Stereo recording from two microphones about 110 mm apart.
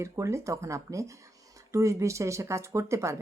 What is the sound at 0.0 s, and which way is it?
Speech, 25° right (ahead or behind).